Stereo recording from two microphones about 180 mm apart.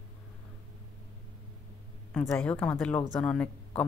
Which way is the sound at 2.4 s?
5° left (ahead or behind).